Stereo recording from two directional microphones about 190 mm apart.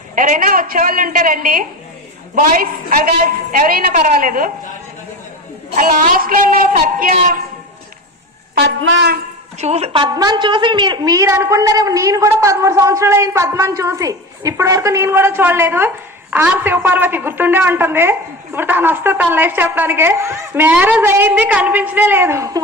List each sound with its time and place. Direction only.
0.2 s a man's voice: 45° right (ahead or behind)
5.7 s a man's voice: 45° right (ahead or behind)
8.5 s a woman's voice: 75° right (ahead or behind)
9.6 s a woman's voice: 35° right (ahead or behind); by 22.6 s 15° right (ahead or behind)